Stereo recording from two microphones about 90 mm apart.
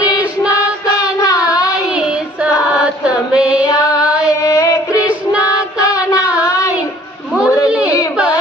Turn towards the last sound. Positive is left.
turn(degrees=-10)  # may be behind; listen again after turning